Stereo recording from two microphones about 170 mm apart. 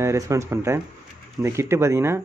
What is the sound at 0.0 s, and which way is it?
Speech, 15° right (ahead or behind).